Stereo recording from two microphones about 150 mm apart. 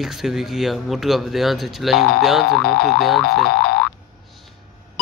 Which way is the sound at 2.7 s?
90° left.